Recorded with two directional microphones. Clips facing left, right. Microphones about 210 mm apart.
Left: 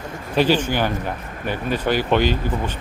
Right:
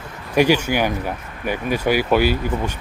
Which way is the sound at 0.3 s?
10° right (ahead or behind).